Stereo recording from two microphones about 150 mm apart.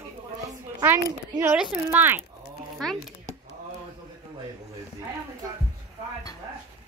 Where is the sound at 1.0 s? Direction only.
15° right (ahead or behind).